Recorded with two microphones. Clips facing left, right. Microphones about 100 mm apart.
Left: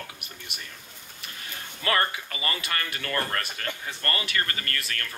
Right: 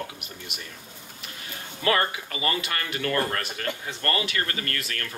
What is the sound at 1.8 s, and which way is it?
A man's voice, 25° right (ahead or behind).